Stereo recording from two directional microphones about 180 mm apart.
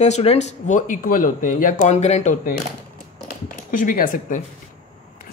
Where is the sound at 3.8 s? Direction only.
50° left (ahead or behind).